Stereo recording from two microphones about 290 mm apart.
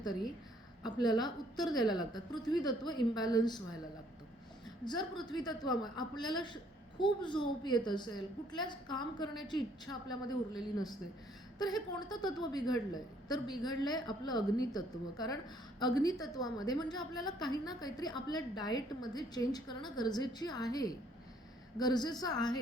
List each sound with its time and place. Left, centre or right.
0.0 s a woman's voice: centre
4.9 s a woman's voice: centre